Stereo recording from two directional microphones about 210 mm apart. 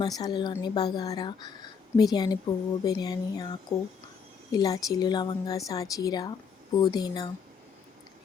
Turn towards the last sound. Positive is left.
turn(degrees=20)  # may be behind; listen again after turning